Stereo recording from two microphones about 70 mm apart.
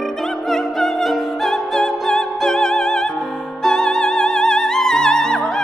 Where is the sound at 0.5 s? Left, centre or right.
Centre.